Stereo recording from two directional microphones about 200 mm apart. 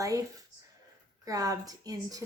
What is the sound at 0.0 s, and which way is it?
Speech, 15° right (ahead or behind).